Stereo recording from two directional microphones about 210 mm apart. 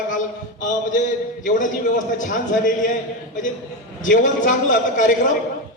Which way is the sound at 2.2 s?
40° left (ahead or behind).